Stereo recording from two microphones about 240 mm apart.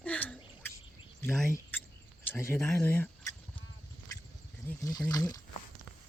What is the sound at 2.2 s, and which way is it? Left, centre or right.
Speech, centre.